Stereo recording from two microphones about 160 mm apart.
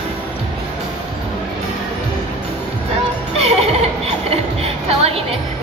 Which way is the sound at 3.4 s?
40° right (ahead or behind).